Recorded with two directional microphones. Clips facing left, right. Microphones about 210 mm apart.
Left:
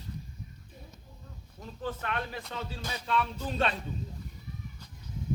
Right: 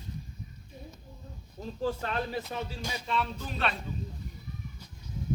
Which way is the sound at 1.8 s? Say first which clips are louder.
Right 3 dB; 30° right (ahead or behind).